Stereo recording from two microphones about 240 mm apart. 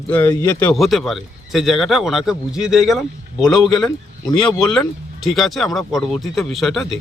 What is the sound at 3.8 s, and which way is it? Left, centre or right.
Speech, centre.